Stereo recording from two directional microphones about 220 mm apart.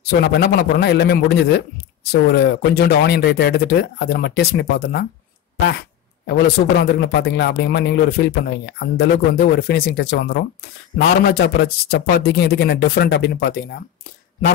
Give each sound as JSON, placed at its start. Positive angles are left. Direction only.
{"t": 0.1, "sound": "speech", "side_deg": 45}